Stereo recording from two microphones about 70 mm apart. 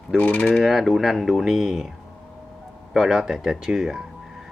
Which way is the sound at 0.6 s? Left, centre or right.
Centre.